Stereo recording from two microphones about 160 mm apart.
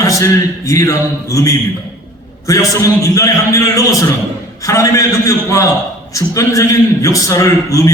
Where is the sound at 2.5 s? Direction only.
20° left (ahead or behind).